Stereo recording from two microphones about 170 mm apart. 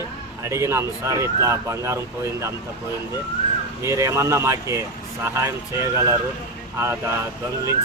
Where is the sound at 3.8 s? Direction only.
15° right (ahead or behind).